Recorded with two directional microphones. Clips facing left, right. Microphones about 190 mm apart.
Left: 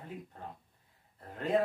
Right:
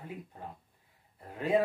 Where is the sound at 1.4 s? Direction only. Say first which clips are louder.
Right 2 dB; 10° right (ahead or behind).